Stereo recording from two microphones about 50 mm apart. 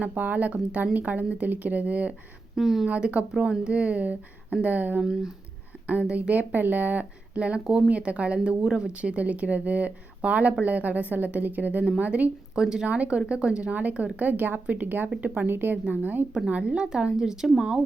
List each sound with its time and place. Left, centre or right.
0.0 s a woman's voice: right
2.6 s speech: centre
2.8 s a woman's voice: right
3.3 s a woman's voice: centre; by 4.9 s right
4.9 s speech: centre
5.9 s a woman's voice: right
7.9 s a woman's voice: right
8.6 s speech: centre
8.9 s a woman's voice: right
12.5 s a woman's voice: centre; by 16.2 s right
16.6 s a woman's voice: centre